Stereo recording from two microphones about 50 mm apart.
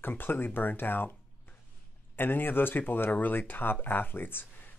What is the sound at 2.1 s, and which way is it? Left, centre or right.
Speech, left.